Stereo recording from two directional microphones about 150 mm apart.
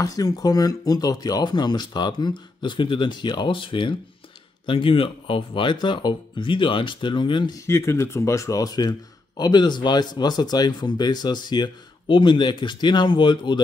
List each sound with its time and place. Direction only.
0.0 s speech: 25° left (ahead or behind)
7.6 s speech: 20° left (ahead or behind)